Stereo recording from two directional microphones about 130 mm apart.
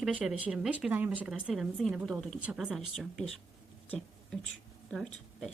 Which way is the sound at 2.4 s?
10° right (ahead or behind).